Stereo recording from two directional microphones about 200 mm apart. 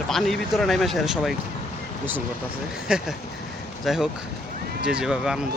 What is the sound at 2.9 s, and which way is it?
Speech, 5° right (ahead or behind).